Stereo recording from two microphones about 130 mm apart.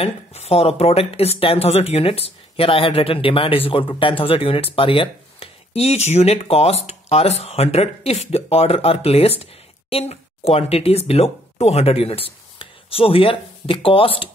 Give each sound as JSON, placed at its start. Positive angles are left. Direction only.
{"t": 0.0, "sound": "speech", "side_deg": 50}
{"t": 5.8, "sound": "speech", "side_deg": 55}